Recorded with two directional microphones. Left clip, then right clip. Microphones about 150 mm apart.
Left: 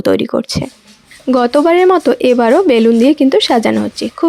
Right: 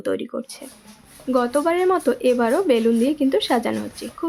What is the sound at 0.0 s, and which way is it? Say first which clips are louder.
Speech: left 12 dB; 60° left (ahead or behind).